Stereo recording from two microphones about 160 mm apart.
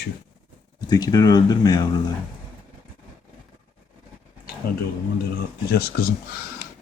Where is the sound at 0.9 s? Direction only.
25° left (ahead or behind).